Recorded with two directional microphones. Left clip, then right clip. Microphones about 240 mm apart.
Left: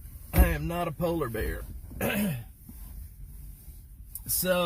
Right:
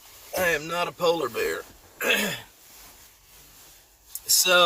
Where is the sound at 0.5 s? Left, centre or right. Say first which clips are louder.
Right 6 dB; centre.